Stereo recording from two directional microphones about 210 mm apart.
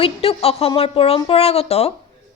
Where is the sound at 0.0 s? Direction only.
25° left (ahead or behind).